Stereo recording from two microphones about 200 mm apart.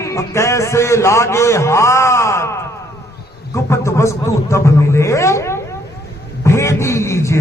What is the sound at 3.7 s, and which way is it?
A man's voice, 15° left (ahead or behind).